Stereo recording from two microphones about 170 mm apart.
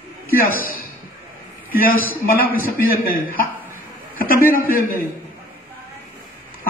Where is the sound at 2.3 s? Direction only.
60° left (ahead or behind).